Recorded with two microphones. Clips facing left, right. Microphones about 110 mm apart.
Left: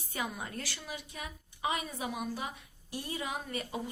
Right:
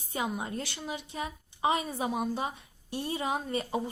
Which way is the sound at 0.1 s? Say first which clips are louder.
Right 5 dB; 25° right (ahead or behind).